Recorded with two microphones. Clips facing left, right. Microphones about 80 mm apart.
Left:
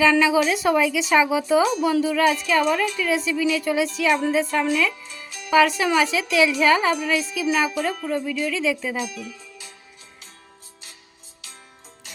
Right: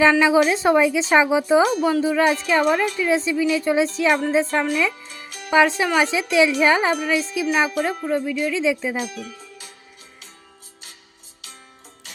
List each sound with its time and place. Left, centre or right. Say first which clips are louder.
0.0 s a woman's voice: right 2 dB; right